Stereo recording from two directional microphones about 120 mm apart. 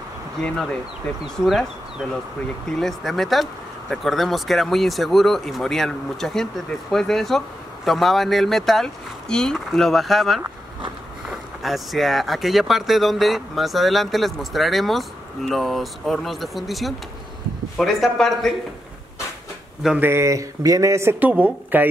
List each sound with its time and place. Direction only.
0.4 s speech: 5° left (ahead or behind)
20.0 s speech: 20° right (ahead or behind)